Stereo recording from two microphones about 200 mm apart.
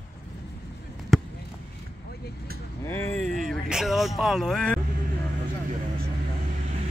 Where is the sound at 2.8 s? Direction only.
10° left (ahead or behind).